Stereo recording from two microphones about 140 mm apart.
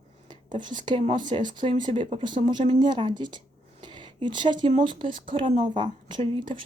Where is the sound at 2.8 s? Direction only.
35° right (ahead or behind).